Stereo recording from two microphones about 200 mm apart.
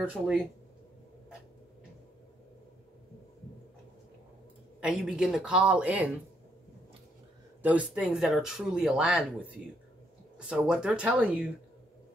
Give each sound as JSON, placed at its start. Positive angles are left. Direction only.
{"t": 0.0, "sound": "speech", "side_deg": -5}
{"t": 4.7, "sound": "speech", "side_deg": -5}
{"t": 7.6, "sound": "speech", "side_deg": -5}